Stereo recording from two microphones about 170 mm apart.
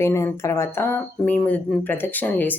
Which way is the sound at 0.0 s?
15° left (ahead or behind).